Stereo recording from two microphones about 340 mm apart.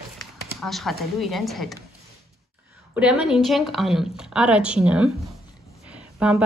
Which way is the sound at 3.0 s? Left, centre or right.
Centre.